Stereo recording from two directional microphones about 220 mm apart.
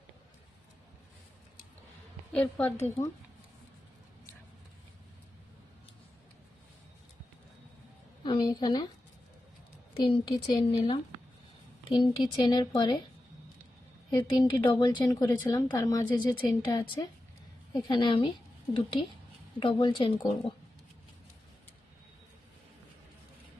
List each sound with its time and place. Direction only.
2.3 s speech: 5° left (ahead or behind)
8.2 s speech: 20° left (ahead or behind)
9.9 s speech: 25° left (ahead or behind)
14.2 s speech: 20° left (ahead or behind)
19.5 s speech: 20° left (ahead or behind)